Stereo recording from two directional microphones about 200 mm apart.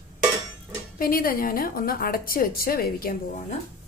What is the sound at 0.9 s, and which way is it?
A woman's voice, 45° left (ahead or behind).